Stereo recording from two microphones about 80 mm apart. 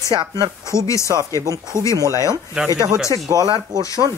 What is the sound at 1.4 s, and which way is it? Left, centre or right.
Speech, right.